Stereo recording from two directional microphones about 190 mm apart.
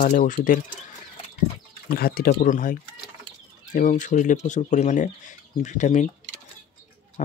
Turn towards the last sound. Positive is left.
turn(degrees=40)  # may be behind; listen again after turning